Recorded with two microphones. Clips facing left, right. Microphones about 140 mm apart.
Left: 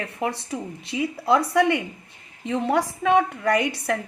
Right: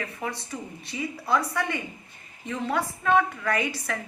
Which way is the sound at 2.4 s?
65° left (ahead or behind).